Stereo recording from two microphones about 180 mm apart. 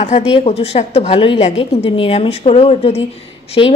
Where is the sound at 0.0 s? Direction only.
35° left (ahead or behind).